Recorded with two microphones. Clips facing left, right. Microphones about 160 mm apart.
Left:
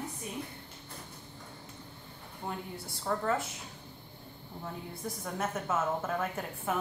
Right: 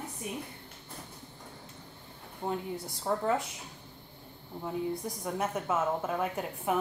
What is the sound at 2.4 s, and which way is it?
Speech, 20° right (ahead or behind).